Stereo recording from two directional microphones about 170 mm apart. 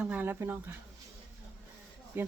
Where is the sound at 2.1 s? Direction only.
10° right (ahead or behind).